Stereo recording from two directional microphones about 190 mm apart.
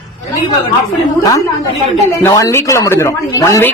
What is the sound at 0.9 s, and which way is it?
A woman's voice, 20° left (ahead or behind).